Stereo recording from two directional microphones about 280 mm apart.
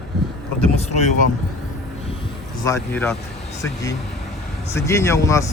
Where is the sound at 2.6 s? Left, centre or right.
Centre.